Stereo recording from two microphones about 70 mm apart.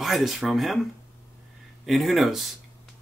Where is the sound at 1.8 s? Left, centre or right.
Centre.